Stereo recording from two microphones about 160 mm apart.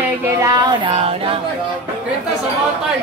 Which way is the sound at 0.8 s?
35° right (ahead or behind).